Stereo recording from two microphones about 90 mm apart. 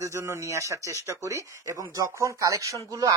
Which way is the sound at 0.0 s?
30° right (ahead or behind).